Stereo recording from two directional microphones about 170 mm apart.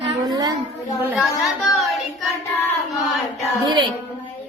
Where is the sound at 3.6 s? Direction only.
25° right (ahead or behind).